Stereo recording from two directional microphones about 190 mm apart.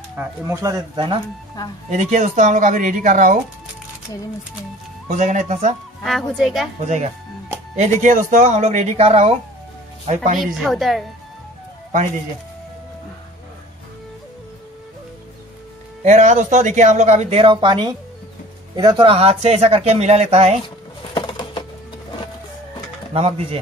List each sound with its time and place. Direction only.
0.2 s speech: 15° right (ahead or behind)
1.9 s speech: 40° right (ahead or behind)
5.0 s speech: 40° right (ahead or behind)
6.0 s a woman's voice: centre (ahead or behind)
7.7 s speech: 40° right (ahead or behind)
10.4 s a woman's voice: centre (ahead or behind)
16.0 s speech: 40° right (ahead or behind)
20.6 s a sound: 25° left (ahead or behind)
23.1 s speech: 30° right (ahead or behind)